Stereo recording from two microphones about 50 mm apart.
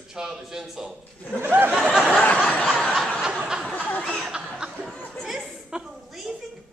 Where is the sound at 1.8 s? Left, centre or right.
Centre.